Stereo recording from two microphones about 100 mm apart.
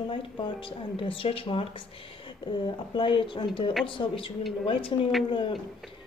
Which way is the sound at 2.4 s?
55° left (ahead or behind).